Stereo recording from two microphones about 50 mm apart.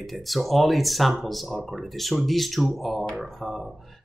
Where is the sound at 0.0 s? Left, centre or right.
Centre.